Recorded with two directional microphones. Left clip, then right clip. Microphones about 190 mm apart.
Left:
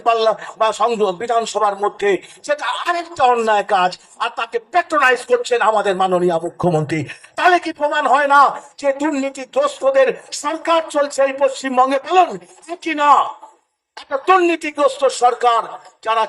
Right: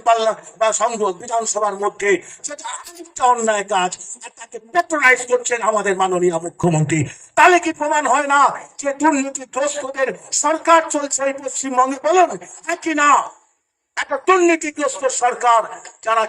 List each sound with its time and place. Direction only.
0.0 s a woman's voice: 20° right (ahead or behind)
14.1 s speech: 50° right (ahead or behind)
14.4 s speech: 15° right (ahead or behind)